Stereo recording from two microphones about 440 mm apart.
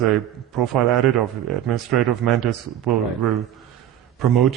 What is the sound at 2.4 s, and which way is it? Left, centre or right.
Speech, right.